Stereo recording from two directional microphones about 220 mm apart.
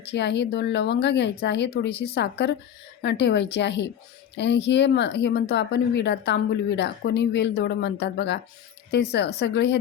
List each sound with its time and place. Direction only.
0.0 s speech: 50° left (ahead or behind)